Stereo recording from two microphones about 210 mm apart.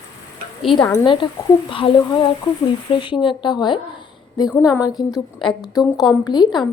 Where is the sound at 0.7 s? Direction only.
15° left (ahead or behind).